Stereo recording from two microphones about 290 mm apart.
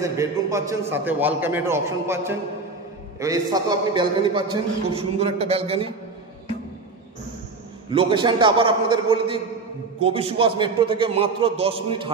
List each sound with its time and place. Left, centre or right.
0.0 s a man's voice: centre
7.9 s a man's voice: centre